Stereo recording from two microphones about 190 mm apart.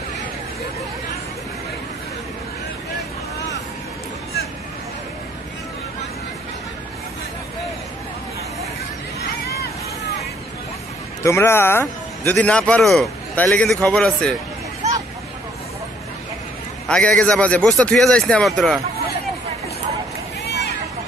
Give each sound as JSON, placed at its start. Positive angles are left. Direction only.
{"t": 11.2, "sound": "a man's voice", "side_deg": 15}
{"t": 16.8, "sound": "a man's voice", "side_deg": 5}
{"t": 20.4, "sound": "run", "side_deg": 60}